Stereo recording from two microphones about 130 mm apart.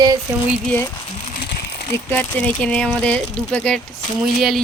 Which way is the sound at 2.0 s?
15° left (ahead or behind).